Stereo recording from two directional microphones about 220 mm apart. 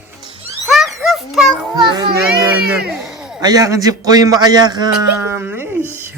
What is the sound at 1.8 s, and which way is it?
Speech, 20° right (ahead or behind).